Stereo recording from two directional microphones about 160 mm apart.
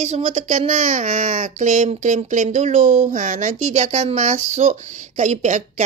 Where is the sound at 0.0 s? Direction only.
50° right (ahead or behind).